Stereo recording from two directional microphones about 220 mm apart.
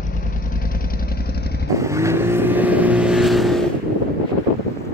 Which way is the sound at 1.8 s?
15° right (ahead or behind).